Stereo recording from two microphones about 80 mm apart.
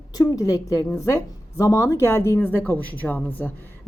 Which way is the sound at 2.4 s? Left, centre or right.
Left.